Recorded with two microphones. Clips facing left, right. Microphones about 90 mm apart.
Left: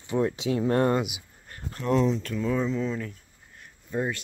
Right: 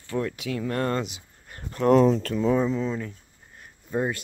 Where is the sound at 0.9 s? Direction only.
10° left (ahead or behind).